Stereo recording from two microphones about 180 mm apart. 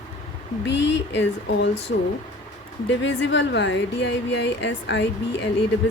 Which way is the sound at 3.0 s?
90° left.